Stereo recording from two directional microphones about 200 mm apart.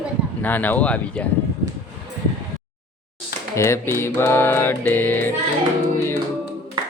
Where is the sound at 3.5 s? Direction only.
15° left (ahead or behind).